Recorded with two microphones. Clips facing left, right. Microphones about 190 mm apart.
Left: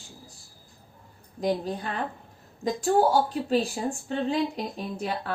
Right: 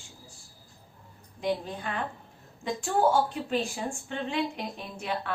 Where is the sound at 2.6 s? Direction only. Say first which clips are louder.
Left 3 dB; 40° left (ahead or behind).